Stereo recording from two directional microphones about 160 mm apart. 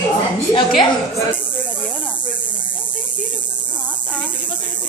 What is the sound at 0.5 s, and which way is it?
Speech, 30° left (ahead or behind).